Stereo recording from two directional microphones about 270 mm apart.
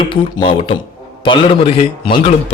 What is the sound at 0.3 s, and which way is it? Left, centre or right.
A man's voice, centre.